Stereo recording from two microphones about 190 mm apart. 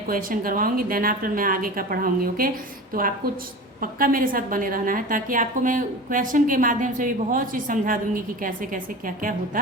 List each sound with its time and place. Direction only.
0.1 s a woman's voice: 50° right (ahead or behind)
3.8 s a woman's voice: 45° right (ahead or behind)